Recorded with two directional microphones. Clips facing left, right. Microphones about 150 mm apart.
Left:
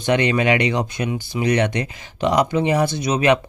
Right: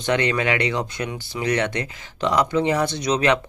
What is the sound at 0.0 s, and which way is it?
Speech, 15° left (ahead or behind).